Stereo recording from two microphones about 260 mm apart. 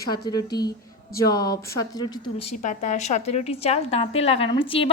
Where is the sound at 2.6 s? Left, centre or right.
Left.